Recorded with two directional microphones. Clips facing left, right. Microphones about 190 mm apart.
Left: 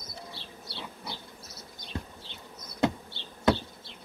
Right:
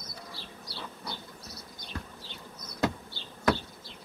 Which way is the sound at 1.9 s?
25° left (ahead or behind).